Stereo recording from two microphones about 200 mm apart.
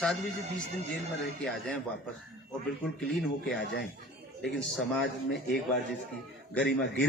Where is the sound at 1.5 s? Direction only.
5° left (ahead or behind).